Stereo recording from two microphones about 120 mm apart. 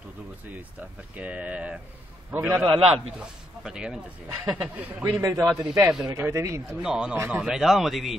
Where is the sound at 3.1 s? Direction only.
5° right (ahead or behind).